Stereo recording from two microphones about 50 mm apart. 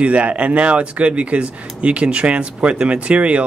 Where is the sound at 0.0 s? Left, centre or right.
Right.